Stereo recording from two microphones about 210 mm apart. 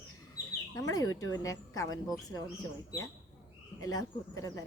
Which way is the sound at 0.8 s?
15° left (ahead or behind).